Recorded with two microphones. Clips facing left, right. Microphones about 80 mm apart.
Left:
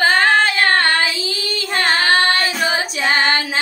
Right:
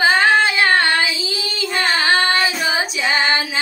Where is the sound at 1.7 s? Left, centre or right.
Left.